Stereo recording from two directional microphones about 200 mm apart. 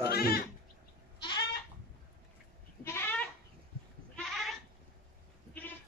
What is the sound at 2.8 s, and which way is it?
Goat, 10° left (ahead or behind).